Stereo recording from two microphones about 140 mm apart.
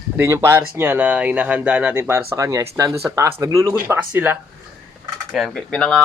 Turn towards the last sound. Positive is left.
turn(degrees=5)  # may be behind; listen again after turning